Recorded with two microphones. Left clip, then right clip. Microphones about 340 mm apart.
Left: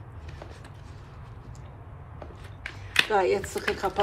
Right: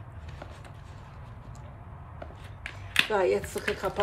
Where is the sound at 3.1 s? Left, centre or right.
Left.